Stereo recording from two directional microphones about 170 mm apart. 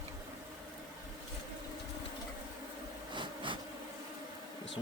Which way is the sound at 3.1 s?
30° right (ahead or behind).